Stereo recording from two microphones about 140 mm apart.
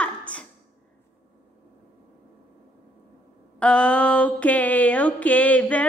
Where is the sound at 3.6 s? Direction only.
10° left (ahead or behind).